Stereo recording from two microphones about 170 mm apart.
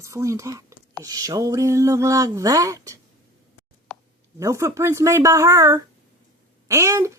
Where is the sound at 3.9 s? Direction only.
5° left (ahead or behind).